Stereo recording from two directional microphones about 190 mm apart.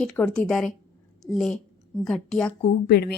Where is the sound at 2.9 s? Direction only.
55° left (ahead or behind).